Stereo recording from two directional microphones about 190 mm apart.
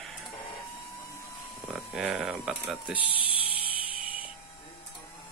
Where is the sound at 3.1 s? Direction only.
30° left (ahead or behind).